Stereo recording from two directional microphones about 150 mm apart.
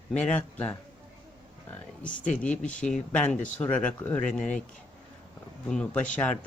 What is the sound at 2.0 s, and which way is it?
Speech, 60° left (ahead or behind).